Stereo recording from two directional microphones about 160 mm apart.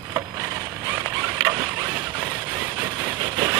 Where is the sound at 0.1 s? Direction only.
20° right (ahead or behind).